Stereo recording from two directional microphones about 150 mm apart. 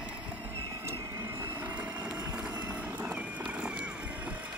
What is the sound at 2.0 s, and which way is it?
Horse, 5° right (ahead or behind).